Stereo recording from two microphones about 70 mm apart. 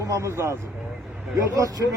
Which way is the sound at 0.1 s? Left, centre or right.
Right.